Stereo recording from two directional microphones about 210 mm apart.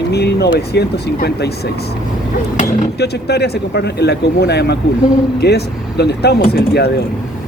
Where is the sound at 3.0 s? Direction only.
50° left (ahead or behind).